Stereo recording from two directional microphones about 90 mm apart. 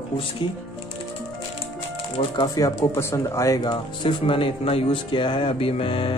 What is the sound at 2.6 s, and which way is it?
Speech, 35° left (ahead or behind).